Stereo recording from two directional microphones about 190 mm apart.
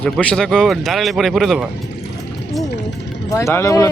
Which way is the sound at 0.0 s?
5° left (ahead or behind).